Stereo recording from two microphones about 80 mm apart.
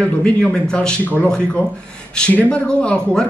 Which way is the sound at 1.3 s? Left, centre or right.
Centre.